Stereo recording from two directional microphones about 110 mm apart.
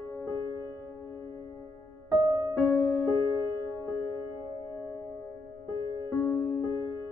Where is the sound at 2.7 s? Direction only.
20° left (ahead or behind).